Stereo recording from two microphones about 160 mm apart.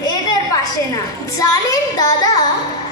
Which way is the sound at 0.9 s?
20° left (ahead or behind).